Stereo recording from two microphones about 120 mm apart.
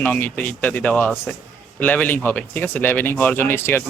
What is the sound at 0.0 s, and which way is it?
Speech, 10° left (ahead or behind).